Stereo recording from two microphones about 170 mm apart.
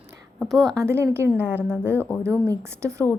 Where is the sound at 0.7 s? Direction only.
15° right (ahead or behind).